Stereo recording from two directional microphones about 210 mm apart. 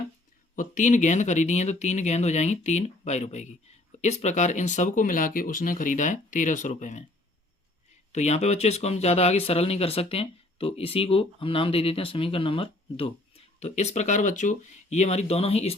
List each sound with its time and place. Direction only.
0.5 s speech: 35° left (ahead or behind)
8.1 s speech: 30° left (ahead or behind)